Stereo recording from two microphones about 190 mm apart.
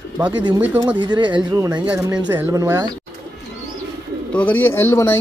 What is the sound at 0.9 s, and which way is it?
Speech, 25° right (ahead or behind).